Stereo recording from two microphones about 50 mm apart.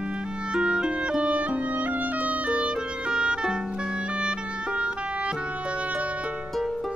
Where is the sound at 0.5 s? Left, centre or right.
Centre.